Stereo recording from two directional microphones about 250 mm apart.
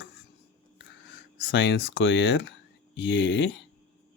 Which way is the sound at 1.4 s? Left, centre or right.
Left.